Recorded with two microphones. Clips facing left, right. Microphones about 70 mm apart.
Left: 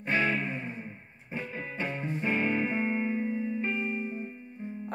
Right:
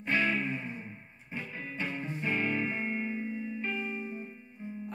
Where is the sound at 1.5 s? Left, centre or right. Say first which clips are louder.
Left 1 dB; left.